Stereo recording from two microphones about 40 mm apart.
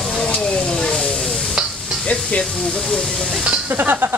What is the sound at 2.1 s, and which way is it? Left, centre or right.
Speech, left.